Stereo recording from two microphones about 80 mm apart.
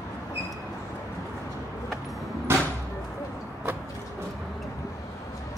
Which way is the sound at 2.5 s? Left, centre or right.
Right.